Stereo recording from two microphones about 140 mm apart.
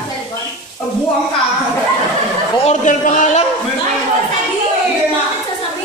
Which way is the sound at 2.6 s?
60° left (ahead or behind).